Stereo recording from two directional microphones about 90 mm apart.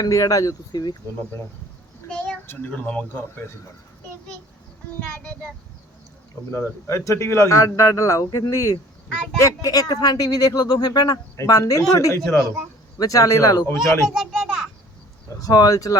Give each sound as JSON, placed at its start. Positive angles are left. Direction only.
{"t": 0.0, "sound": "a man's voice", "side_deg": 40}
{"t": 2.0, "sound": "a sound", "side_deg": 10}
{"t": 2.5, "sound": "speech", "side_deg": 15}
{"t": 4.9, "sound": "speech", "side_deg": 15}
{"t": 6.5, "sound": "a man's voice", "side_deg": 35}
{"t": 14.1, "sound": "children playing", "side_deg": -5}
{"t": 15.4, "sound": "speech", "side_deg": 45}